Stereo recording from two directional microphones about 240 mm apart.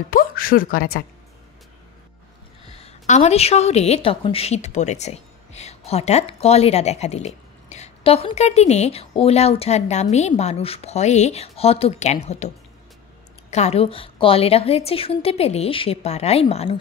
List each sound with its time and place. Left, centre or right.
0.1 s a woman's voice: left
2.7 s a woman's voice: left
13.5 s a woman's voice: left